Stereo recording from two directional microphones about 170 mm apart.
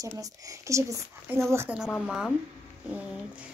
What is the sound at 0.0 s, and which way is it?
Speech, 20° right (ahead or behind).